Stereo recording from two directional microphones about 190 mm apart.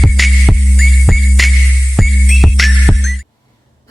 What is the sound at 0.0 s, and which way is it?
Music, centre (ahead or behind).